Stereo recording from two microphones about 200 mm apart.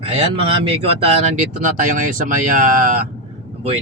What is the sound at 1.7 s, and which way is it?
Speech, 40° right (ahead or behind).